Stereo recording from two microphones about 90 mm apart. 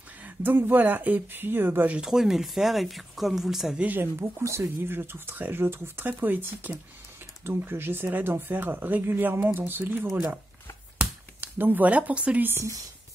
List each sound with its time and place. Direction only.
0.2 s speech: 20° right (ahead or behind)
2.0 s speech: 5° right (ahead or behind)
3.8 s speech: 20° right (ahead or behind)